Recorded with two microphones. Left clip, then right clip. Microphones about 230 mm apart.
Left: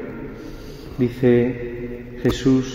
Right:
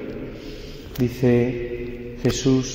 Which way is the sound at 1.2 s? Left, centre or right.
Right.